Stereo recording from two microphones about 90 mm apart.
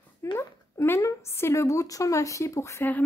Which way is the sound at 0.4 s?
30° left (ahead or behind).